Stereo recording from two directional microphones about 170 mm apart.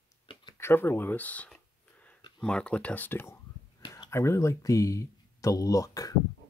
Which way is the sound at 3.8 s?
25° left (ahead or behind).